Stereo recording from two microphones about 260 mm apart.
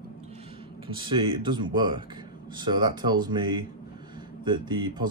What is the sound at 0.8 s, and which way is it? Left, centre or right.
Speech, centre.